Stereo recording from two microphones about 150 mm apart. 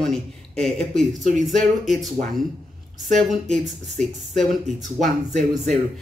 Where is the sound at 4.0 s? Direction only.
55° right (ahead or behind).